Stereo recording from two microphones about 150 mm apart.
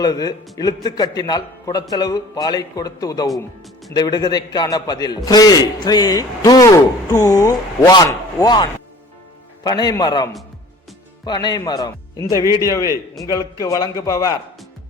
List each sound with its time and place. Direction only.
0.0 s a man's voice: 25° left (ahead or behind)
11.3 s a man's voice: 30° left (ahead or behind)
12.3 s a man's voice: 20° right (ahead or behind)
12.6 s a man's voice: 20° left (ahead or behind)